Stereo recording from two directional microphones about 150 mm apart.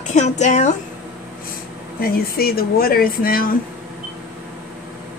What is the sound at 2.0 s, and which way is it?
Speech, 90° left.